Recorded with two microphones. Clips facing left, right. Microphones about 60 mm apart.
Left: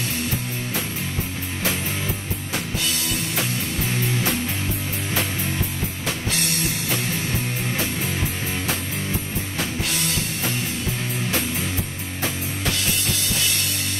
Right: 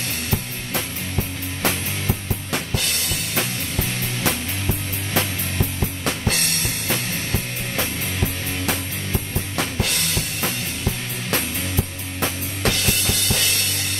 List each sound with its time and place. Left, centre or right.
2.5 s drum kit: right
6.0 s drum kit: right
9.6 s drum kit: right
12.2 s music: right